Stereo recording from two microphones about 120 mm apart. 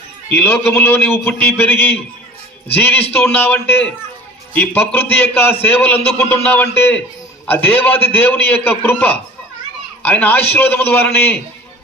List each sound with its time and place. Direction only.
0.3 s a man's voice: 15° left (ahead or behind)